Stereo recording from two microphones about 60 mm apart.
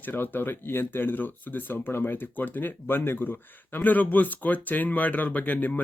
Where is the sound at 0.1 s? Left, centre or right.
Left.